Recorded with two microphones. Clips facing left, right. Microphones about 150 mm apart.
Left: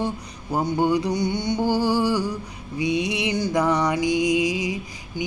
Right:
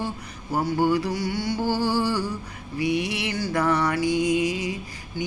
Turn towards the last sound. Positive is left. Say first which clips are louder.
# left 2 dB
turn(degrees=15)  # may be behind; listen again after turning